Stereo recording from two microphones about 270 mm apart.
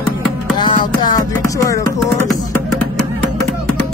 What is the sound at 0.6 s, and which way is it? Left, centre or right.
Music, centre.